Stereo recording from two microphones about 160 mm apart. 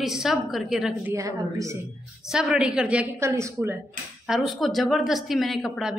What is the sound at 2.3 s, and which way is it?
A woman's voice, 5° right (ahead or behind).